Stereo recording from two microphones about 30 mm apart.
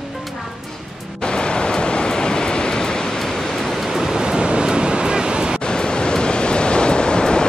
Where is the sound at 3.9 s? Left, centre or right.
Centre.